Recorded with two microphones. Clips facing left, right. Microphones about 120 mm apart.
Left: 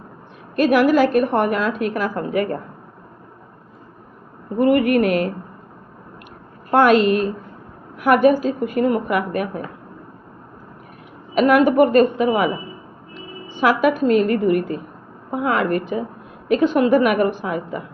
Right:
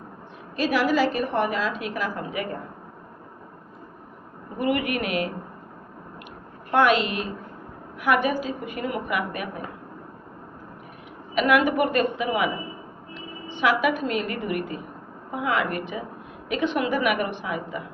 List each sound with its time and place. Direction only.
0.5 s a woman's voice: 55° left (ahead or behind)
4.5 s a woman's voice: 40° left (ahead or behind)
6.7 s a woman's voice: 45° left (ahead or behind)
11.3 s a woman's voice: 40° left (ahead or behind)
13.5 s a woman's voice: 40° left (ahead or behind)